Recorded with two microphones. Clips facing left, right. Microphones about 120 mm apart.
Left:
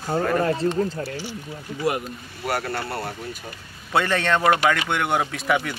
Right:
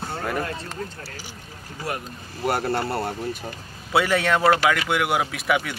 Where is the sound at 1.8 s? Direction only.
15° left (ahead or behind).